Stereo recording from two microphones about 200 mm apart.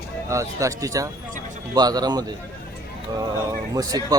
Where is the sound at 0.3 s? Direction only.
15° right (ahead or behind).